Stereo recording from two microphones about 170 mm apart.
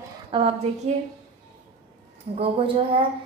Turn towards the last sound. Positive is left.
turn(degrees=-35)  # may be behind; listen again after turning